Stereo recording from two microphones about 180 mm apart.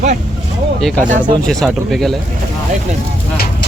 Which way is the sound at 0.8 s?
Centre (ahead or behind).